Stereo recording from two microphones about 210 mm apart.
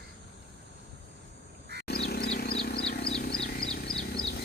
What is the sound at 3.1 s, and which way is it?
Wild animals, 45° left (ahead or behind).